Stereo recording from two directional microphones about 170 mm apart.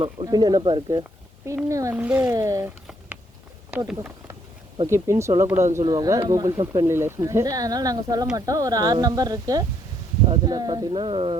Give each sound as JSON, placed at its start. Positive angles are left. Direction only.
{"t": 0.0, "sound": "a child's voice", "side_deg": -25}
{"t": 3.7, "sound": "a child's voice", "side_deg": -10}